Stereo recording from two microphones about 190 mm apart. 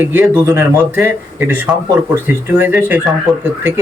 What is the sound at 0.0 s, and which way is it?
Speech, 10° right (ahead or behind).